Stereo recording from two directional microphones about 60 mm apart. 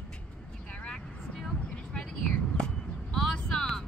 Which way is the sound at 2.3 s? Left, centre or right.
Centre.